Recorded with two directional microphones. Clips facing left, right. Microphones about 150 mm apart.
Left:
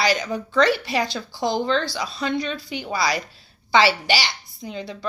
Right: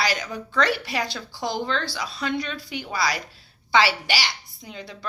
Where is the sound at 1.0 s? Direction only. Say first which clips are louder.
Left 5 dB; 5° right (ahead or behind).